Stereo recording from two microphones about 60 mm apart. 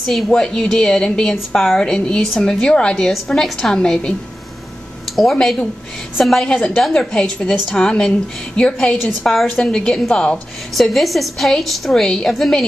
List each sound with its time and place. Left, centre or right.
0.0 s a woman's voice: centre
3.1 s a woman's voice: centre
5.1 s a woman's voice: centre